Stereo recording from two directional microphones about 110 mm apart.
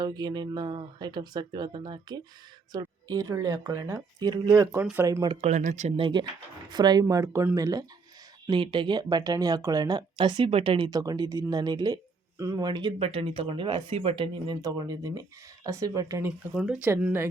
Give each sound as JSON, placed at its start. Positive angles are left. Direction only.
{"t": 0.0, "sound": "speech", "side_deg": -35}
{"t": 4.8, "sound": "speech", "side_deg": -15}
{"t": 5.0, "sound": "speech", "side_deg": -30}
{"t": 5.4, "sound": "speech", "side_deg": -90}
{"t": 6.0, "sound": "speech", "side_deg": -50}
{"t": 8.4, "sound": "speech", "side_deg": -50}
{"t": 10.8, "sound": "speech", "side_deg": -35}
{"t": 13.0, "sound": "speech", "side_deg": -55}
{"t": 16.6, "sound": "speech", "side_deg": -10}